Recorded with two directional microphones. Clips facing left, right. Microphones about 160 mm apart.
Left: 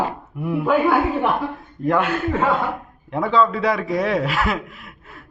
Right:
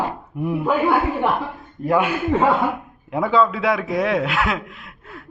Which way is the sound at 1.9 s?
10° right (ahead or behind).